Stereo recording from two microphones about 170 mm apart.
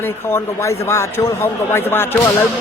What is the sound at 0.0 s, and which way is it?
Child singing, 15° left (ahead or behind).